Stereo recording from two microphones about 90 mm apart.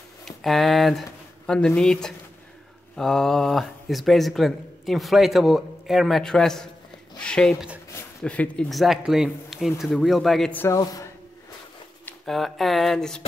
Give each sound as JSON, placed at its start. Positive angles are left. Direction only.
{"t": 0.2, "sound": "speech", "side_deg": 5}
{"t": 7.2, "sound": "a sound", "side_deg": 10}
{"t": 8.2, "sound": "speech", "side_deg": 10}
{"t": 8.6, "sound": "speech", "side_deg": 0}
{"t": 10.8, "sound": "a man's voice", "side_deg": 45}
{"t": 12.3, "sound": "speech", "side_deg": 5}